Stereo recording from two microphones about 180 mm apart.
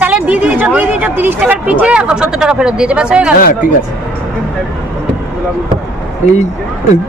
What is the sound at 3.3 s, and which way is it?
Speech, 55° left (ahead or behind).